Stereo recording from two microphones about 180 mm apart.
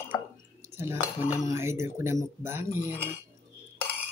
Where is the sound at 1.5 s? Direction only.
15° right (ahead or behind).